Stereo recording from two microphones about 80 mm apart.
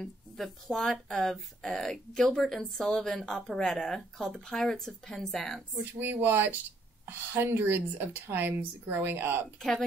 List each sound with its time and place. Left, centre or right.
0.0 s speech: centre
5.9 s speech: right
9.6 s speech: centre